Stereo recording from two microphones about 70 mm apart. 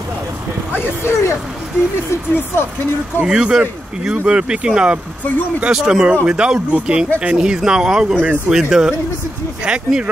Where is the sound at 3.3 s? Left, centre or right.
Centre.